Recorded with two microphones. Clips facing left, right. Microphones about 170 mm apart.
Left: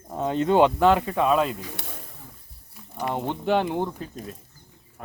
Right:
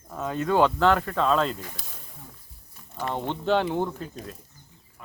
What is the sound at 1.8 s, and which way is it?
Speech, 65° left (ahead or behind).